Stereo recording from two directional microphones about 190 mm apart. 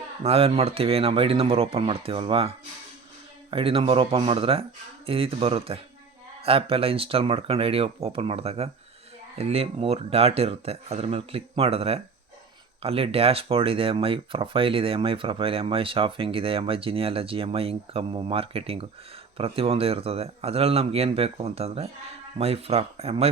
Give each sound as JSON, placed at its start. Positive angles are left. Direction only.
{"t": 0.2, "sound": "speech", "side_deg": -30}
{"t": 3.5, "sound": "speech", "side_deg": -30}